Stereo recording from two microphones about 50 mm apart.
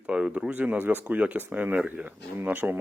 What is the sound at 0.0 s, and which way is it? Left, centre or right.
Speech, right.